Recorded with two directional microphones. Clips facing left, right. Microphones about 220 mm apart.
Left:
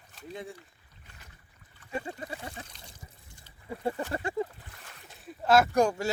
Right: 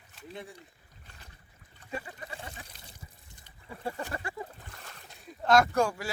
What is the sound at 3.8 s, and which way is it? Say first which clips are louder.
Speech: left 4 dB; 30° left (ahead or behind).